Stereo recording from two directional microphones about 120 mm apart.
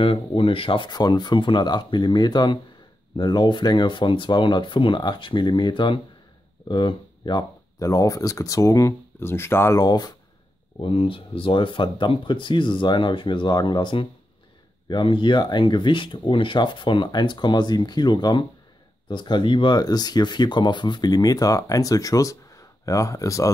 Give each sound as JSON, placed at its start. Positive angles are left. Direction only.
{"t": 0.0, "sound": "speech", "side_deg": 50}
{"t": 9.8, "sound": "speech", "side_deg": 35}
{"t": 10.8, "sound": "speech", "side_deg": 50}